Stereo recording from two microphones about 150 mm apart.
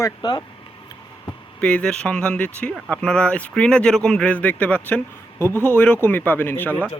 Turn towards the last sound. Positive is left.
turn(degrees=-10)  # may be behind; listen again after turning